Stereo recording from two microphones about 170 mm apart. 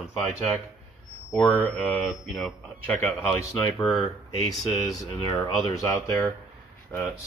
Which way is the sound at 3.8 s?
Centre (ahead or behind).